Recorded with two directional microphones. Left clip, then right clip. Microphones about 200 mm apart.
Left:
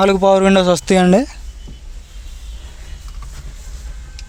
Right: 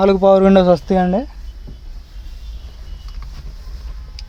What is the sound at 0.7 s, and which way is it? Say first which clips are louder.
Speech: right 1 dB; 5° left (ahead or behind).